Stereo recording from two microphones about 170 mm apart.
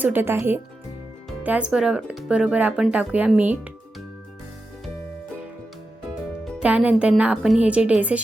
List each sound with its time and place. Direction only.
0.0 s speech: 10° right (ahead or behind)
6.6 s speech: 5° right (ahead or behind)